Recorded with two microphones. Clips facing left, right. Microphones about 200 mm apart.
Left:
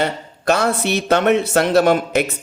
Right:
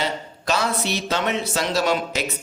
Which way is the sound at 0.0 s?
55° left (ahead or behind).